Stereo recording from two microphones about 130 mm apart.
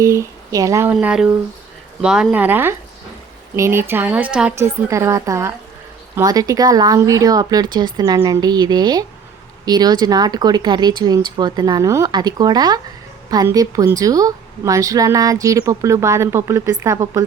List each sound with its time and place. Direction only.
0.0 s a woman's voice: 25° right (ahead or behind)
0.9 s speech: 5° right (ahead or behind)
4.5 s a woman's voice: 20° right (ahead or behind)